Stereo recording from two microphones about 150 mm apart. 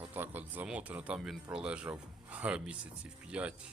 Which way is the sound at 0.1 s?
10° right (ahead or behind).